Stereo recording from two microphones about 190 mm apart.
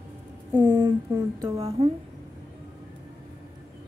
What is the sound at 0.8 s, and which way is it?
Speech, 15° right (ahead or behind).